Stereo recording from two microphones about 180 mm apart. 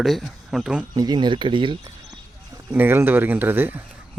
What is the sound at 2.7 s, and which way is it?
Speech, 10° right (ahead or behind).